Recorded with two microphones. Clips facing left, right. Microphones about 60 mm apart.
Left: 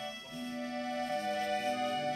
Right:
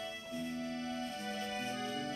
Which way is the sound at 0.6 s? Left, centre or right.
Left.